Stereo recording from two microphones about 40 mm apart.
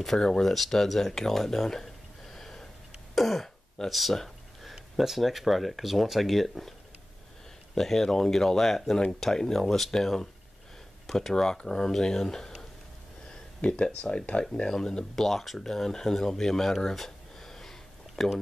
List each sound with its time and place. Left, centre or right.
0.0 s speech: centre
2.3 s sniff: centre
3.2 s throat clearing: centre
3.9 s a sound: centre
4.9 s speech: centre
7.7 s speech: centre
13.6 s speech: left
14.4 s speech: centre
15.1 s speech: centre
16.9 s a sound: centre